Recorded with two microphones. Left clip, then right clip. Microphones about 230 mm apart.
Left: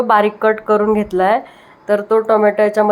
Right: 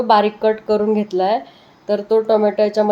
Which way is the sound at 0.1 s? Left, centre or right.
Centre.